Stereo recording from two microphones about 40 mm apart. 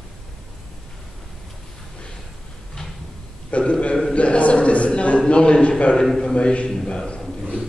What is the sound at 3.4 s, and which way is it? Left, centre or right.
A man's voice, left.